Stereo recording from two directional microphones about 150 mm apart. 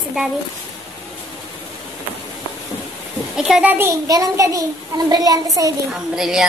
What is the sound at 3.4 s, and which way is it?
A child's voice, 5° right (ahead or behind).